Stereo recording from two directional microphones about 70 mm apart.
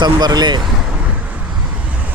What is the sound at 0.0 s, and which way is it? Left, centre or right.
Speech, right.